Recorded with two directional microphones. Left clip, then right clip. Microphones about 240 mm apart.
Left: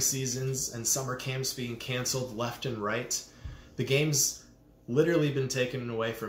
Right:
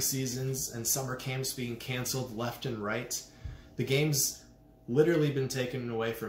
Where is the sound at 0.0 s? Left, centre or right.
Centre.